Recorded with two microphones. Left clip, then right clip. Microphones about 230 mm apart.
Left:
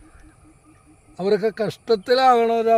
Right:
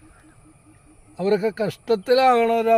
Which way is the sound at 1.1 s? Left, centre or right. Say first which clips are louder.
Left 1 dB; centre.